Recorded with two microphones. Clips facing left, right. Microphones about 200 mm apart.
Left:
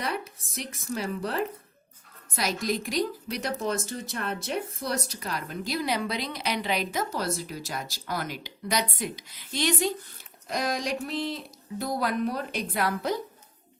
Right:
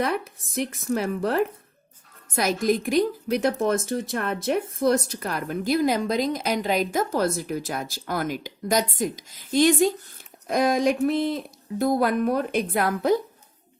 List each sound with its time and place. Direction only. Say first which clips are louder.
0.0 s a woman's voice: right 7 dB; 50° right (ahead or behind)